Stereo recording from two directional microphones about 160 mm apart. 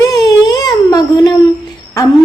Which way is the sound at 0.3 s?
25° left (ahead or behind).